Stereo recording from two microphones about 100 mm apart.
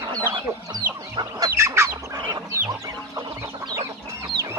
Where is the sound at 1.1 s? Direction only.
40° right (ahead or behind).